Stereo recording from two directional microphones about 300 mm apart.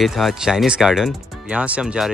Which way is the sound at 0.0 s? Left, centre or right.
Centre.